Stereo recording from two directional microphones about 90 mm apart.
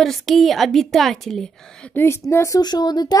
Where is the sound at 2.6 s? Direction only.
50° left (ahead or behind).